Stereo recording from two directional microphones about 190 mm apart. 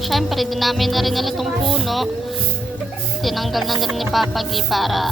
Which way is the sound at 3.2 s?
Centre (ahead or behind).